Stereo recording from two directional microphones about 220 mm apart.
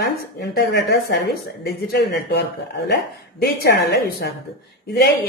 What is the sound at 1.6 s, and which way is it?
Speech, 45° left (ahead or behind).